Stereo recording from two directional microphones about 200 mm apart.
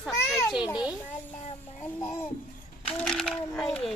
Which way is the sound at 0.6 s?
20° left (ahead or behind).